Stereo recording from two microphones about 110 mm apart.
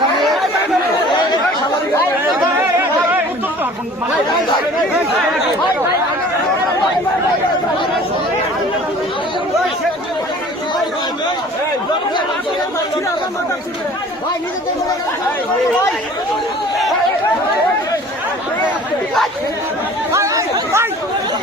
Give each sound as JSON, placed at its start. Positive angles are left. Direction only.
{"t": 0.2, "sound": "chatter", "side_deg": 0}
{"t": 20.1, "sound": "chatter", "side_deg": -25}